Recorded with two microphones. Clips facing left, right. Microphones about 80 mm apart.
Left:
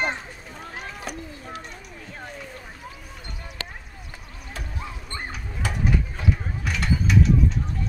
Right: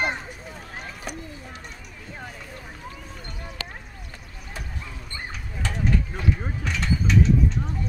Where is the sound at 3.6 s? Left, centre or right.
Left.